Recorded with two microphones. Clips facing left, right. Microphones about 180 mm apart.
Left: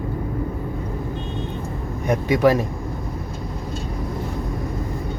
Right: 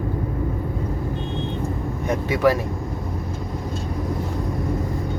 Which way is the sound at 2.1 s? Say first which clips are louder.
Left 2 dB; 15° left (ahead or behind).